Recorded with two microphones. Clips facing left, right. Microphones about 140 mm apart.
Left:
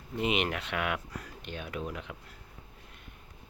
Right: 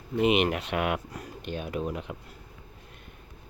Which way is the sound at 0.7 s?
45° right (ahead or behind).